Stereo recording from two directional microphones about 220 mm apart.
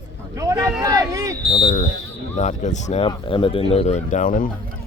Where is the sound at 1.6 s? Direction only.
35° left (ahead or behind).